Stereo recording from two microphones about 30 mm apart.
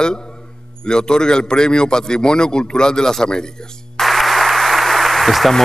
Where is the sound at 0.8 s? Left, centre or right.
Left.